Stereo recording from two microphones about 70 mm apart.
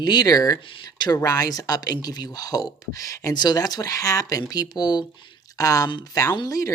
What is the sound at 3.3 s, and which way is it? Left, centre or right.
Speech, left.